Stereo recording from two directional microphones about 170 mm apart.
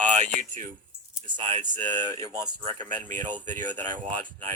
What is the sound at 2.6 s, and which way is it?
Speech, 50° right (ahead or behind).